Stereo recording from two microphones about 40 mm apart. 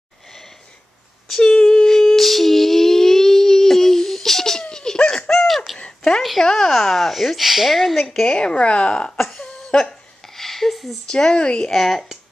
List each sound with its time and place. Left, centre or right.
1.6 s humming: left
1.9 s humming: centre
5.8 s a sound: left
6.4 s a sound: centre
8.0 s a woman's voice: centre
8.3 s speech: left
9.1 s cough: centre
10.2 s a sound: centre
11.1 s speech: left
11.7 s speech: centre